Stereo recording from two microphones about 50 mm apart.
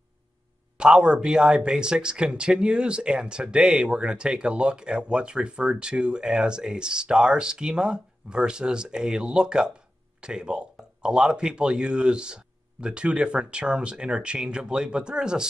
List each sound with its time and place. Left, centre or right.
0.7 s speech: centre